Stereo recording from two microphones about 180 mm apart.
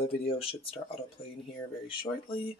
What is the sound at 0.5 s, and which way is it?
Speech, 30° left (ahead or behind).